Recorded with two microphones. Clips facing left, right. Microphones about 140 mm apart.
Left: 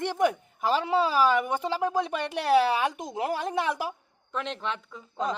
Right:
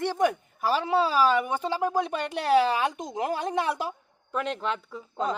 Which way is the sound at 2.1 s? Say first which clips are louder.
Even; 10° left (ahead or behind).